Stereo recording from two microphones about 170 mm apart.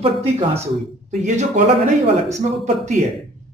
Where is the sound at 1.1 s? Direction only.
45° right (ahead or behind).